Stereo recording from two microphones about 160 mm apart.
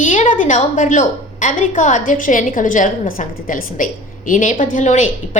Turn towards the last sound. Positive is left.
turn(degrees=50)  # may be behind; listen again after turning